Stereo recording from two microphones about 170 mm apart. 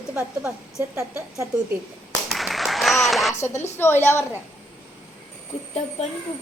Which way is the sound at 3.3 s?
15° left (ahead or behind).